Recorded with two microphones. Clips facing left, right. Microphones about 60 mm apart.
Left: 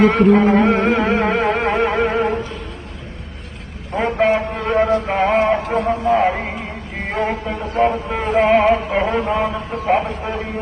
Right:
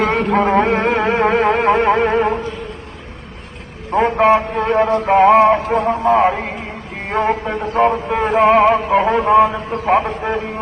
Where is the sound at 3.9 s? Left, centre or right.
Right.